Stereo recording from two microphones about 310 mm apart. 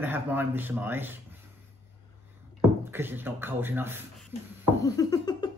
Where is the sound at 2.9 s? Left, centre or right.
Centre.